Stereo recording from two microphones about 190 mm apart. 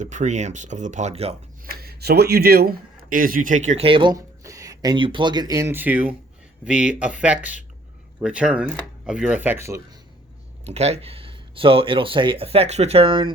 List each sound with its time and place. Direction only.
0.0 s speech: 40° right (ahead or behind)
1.7 s speech: 55° right (ahead or behind); by 9.8 s 15° right (ahead or behind)
10.7 s speech: 35° right (ahead or behind)